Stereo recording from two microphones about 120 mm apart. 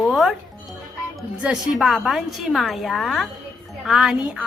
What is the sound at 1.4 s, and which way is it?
A woman's voice, 5° right (ahead or behind).